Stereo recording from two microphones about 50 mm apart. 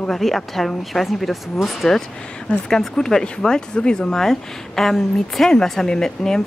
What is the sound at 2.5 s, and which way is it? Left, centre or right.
A woman's voice, centre.